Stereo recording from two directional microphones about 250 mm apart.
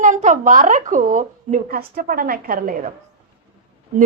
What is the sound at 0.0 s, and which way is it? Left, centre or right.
A woman's voice, right.